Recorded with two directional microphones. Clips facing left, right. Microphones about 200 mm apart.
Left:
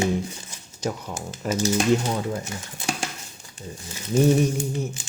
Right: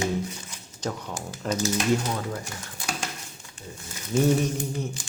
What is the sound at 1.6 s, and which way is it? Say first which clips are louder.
Speech: left 4 dB; 30° left (ahead or behind).